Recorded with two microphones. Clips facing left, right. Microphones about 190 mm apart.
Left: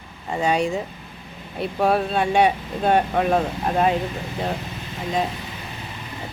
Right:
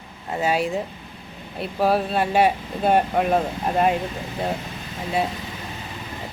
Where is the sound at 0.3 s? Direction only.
5° right (ahead or behind).